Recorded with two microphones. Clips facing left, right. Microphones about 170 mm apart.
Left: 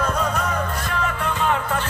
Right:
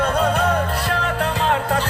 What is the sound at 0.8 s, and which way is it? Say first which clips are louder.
Music: right 3 dB; 70° right (ahead or behind).